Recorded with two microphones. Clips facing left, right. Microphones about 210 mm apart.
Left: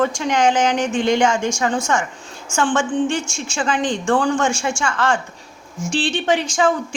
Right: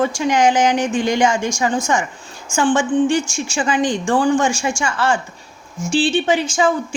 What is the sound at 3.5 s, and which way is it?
A woman's voice, 10° right (ahead or behind).